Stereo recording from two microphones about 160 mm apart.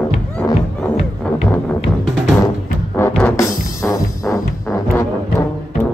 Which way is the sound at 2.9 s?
10° left (ahead or behind).